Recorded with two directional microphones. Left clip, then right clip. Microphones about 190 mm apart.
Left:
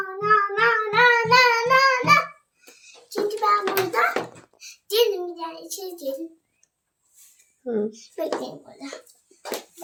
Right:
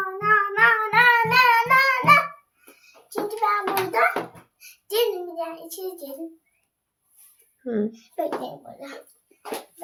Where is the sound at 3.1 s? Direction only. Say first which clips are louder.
Left 2 dB; 15° right (ahead or behind).